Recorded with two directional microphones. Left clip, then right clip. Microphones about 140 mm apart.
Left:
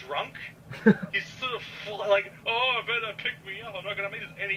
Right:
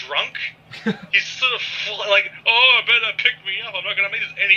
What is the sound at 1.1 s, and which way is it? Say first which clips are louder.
Speech: right 12 dB; 30° right (ahead or behind).